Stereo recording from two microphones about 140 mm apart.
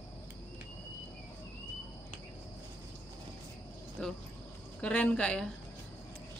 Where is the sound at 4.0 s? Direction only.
10° left (ahead or behind).